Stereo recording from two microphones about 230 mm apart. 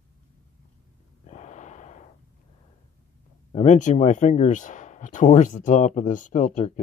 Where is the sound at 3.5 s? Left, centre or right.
Left.